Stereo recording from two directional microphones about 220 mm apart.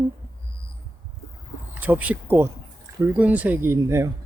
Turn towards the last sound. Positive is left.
turn(degrees=-10)  # may be behind; listen again after turning